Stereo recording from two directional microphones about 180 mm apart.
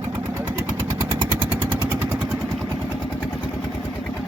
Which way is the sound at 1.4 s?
10° right (ahead or behind).